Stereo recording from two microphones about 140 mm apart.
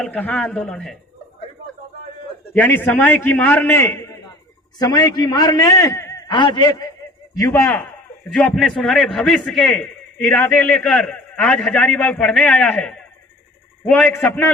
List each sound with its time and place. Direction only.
0.0 s a man's voice: 10° left (ahead or behind)
2.6 s a man's voice: 15° left (ahead or behind); by 6.9 s 30° left (ahead or behind)
7.4 s a man's voice: 10° left (ahead or behind)